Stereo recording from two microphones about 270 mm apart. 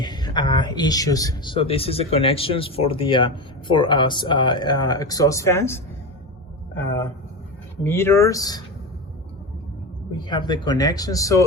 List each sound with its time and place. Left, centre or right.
0.0 s speech: centre
7.9 s speech: centre
10.2 s speech: centre